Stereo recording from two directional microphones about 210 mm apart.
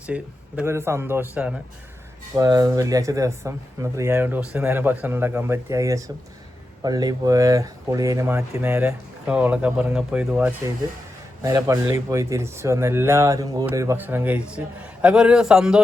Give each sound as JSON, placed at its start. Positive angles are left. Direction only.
{"t": 0.0, "sound": "speech", "side_deg": -5}
{"t": 2.3, "sound": "speech", "side_deg": -15}
{"t": 11.4, "sound": "a man's voice", "side_deg": -15}